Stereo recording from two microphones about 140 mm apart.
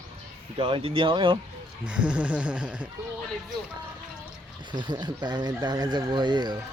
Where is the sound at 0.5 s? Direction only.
40° right (ahead or behind).